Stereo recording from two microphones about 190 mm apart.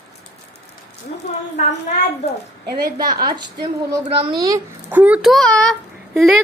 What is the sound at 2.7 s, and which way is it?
Speech, 55° right (ahead or behind).